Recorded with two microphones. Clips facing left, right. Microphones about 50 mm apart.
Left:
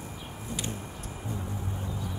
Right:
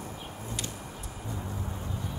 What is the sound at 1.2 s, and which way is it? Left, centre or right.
Music, left.